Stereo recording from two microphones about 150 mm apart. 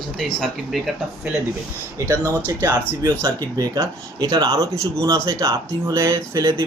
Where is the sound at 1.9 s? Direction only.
15° right (ahead or behind).